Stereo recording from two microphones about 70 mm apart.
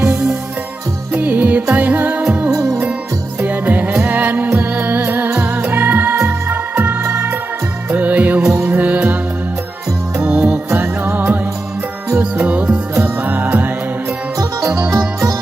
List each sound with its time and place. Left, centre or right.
0.0 s music: centre
2.6 s music: centre
3.4 s music: right
5.3 s music: centre
5.7 s music: right
7.0 s music: right
7.9 s music: right
10.2 s music: centre
14.9 s music: right